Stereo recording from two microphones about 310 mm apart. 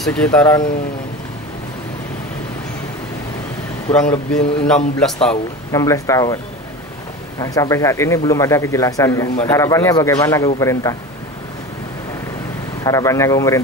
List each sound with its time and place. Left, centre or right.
0.0 s a man's voice: centre
4.1 s a man's voice: centre
7.3 s a man's voice: centre
12.8 s a man's voice: centre